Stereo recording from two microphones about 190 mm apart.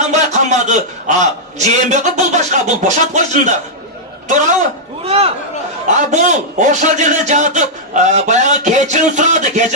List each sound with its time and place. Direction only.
0.1 s a man's voice: 35° right (ahead or behind)
5.0 s a man's voice: 30° right (ahead or behind)